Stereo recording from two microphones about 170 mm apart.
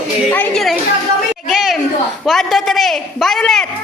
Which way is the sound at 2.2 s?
Centre (ahead or behind).